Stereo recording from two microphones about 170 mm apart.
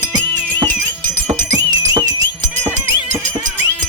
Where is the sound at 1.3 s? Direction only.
25° right (ahead or behind).